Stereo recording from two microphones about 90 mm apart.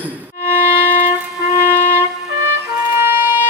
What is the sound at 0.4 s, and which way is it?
Music, 25° right (ahead or behind).